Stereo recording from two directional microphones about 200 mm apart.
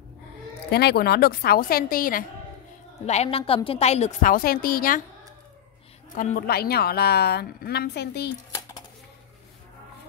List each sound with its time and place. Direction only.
0.7 s a woman's voice: 55° left (ahead or behind)
3.1 s a woman's voice: 30° left (ahead or behind)
6.1 s a woman's voice: 40° left (ahead or behind)
8.5 s a sound: 15° left (ahead or behind)